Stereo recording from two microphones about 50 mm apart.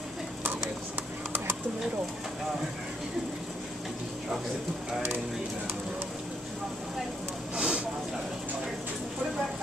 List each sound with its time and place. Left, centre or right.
7.5 s vehicle: right